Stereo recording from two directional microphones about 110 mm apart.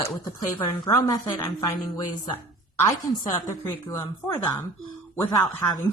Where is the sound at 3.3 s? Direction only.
35° left (ahead or behind).